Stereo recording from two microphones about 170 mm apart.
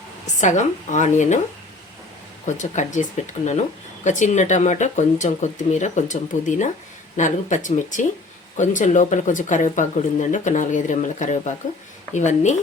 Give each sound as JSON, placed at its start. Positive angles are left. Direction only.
{"t": 0.3, "sound": "speech", "side_deg": 45}
{"t": 2.6, "sound": "speech", "side_deg": 45}